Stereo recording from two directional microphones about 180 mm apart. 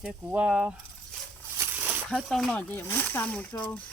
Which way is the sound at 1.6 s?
10° right (ahead or behind).